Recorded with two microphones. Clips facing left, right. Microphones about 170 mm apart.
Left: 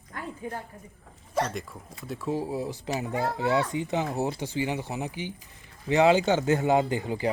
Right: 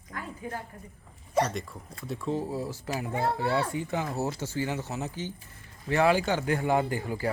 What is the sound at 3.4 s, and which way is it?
Speech, 20° left (ahead or behind).